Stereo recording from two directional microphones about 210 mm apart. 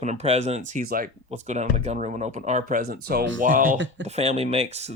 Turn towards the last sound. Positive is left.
turn(degrees=-30)  # may be behind; listen again after turning